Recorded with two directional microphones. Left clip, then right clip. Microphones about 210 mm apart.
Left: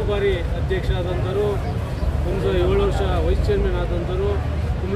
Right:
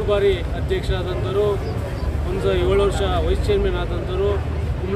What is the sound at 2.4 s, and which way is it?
Speech, 15° right (ahead or behind).